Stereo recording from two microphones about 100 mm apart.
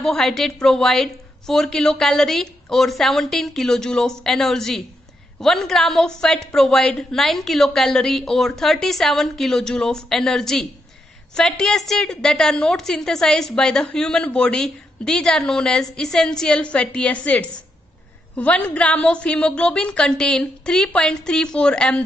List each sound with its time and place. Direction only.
0.0 s a woman's voice: 5° left (ahead or behind)